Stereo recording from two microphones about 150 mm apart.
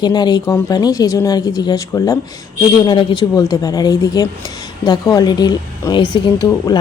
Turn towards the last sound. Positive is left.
turn(degrees=25)  # may be behind; listen again after turning